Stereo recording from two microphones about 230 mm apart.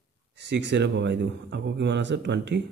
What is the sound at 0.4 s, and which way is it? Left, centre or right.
A man's voice, right.